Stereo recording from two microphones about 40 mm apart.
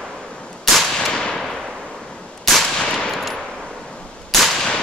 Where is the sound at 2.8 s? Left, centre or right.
Centre.